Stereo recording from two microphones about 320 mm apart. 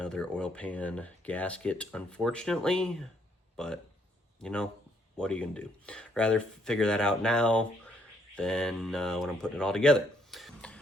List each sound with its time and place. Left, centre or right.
0.0 s speech: centre
4.4 s speech: centre